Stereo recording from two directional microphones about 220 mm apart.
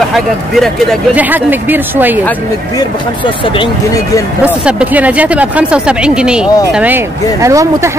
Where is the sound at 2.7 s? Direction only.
20° left (ahead or behind).